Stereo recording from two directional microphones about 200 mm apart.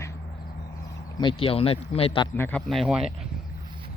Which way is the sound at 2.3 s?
10° left (ahead or behind).